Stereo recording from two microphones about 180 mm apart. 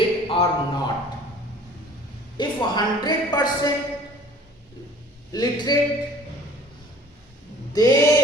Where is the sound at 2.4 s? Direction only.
25° left (ahead or behind).